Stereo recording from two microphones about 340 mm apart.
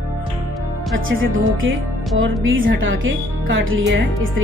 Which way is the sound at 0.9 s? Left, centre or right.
Right.